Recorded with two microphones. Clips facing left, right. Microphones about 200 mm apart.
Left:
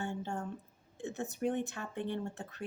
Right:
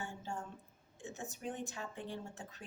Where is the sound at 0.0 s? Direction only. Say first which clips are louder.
Left 6 dB; 65° left (ahead or behind).